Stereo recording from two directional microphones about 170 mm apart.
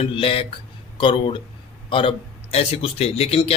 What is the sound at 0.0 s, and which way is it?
Speech, 30° left (ahead or behind).